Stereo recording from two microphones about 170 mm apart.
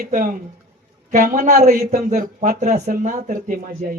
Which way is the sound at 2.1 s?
45° right (ahead or behind).